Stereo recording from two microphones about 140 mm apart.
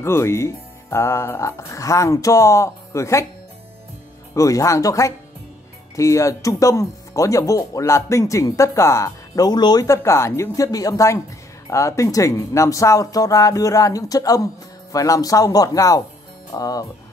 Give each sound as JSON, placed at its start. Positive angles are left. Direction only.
{"t": 0.0, "sound": "speech", "side_deg": 20}
{"t": 4.3, "sound": "speech", "side_deg": 25}